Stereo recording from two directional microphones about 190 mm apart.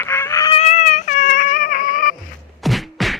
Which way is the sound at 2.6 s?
Centre (ahead or behind).